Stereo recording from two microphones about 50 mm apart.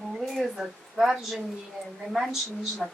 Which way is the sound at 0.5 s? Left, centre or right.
Centre.